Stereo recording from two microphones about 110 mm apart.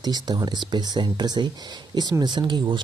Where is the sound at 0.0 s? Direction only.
40° right (ahead or behind).